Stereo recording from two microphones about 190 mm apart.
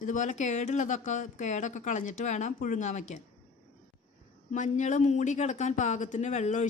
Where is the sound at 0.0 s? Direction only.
40° left (ahead or behind).